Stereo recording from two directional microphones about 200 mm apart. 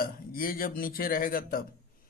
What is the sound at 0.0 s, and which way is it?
Speech, 45° left (ahead or behind).